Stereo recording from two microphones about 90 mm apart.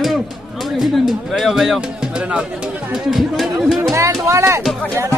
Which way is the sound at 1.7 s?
10° right (ahead or behind).